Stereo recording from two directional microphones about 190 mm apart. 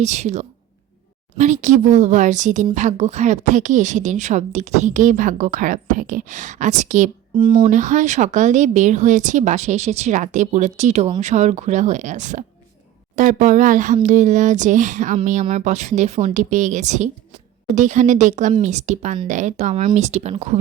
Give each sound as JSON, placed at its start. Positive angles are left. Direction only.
{"t": 0.0, "sound": "speech", "side_deg": -35}
{"t": 7.3, "sound": "speech", "side_deg": -25}
{"t": 7.7, "sound": "speech", "side_deg": -40}